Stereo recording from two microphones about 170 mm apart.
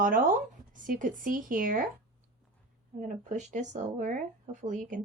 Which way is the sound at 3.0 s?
50° right (ahead or behind).